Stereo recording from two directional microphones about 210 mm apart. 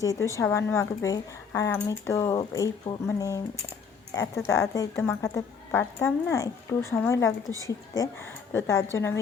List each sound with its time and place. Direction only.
0.0 s speech: 15° left (ahead or behind)